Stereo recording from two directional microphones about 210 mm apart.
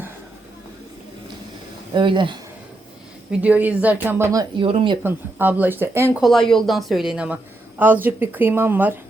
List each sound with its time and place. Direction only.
1.9 s speech: 20° right (ahead or behind)
3.4 s speech: 5° right (ahead or behind); by 4.9 s 25° right (ahead or behind)
5.0 s speech: 10° right (ahead or behind)
6.2 s speech: centre (ahead or behind)